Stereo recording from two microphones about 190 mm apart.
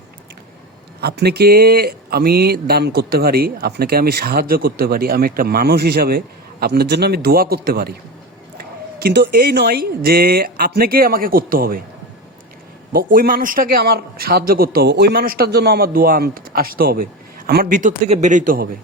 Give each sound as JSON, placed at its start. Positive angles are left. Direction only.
{"t": 1.0, "sound": "a man's voice", "side_deg": -60}
{"t": 12.9, "sound": "a man's voice", "side_deg": -50}